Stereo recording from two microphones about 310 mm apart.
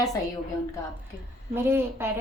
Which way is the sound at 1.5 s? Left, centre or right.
Centre.